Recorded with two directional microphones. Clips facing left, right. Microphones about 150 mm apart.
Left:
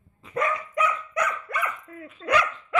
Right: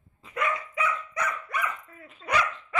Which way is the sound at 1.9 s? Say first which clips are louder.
Left 5 dB; 70° left (ahead or behind).